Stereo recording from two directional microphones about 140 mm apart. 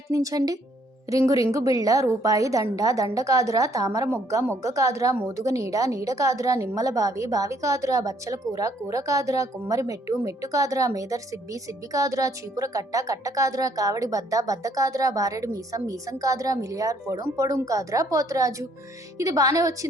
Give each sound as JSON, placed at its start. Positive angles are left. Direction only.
{"t": 0.1, "sound": "a woman's voice", "side_deg": -25}